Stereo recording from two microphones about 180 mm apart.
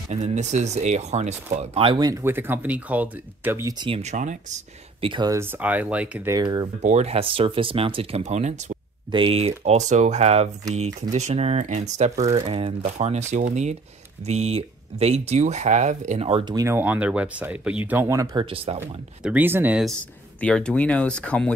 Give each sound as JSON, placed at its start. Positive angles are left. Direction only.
{"t": 0.1, "sound": "speech", "side_deg": -40}
{"t": 3.7, "sound": "speech", "side_deg": -25}
{"t": 4.0, "sound": "speech", "side_deg": -40}
{"t": 5.1, "sound": "speech", "side_deg": -20}
{"t": 6.3, "sound": "speech", "side_deg": -20}
{"t": 6.8, "sound": "speech", "side_deg": -40}
{"t": 19.2, "sound": "speech", "side_deg": -10}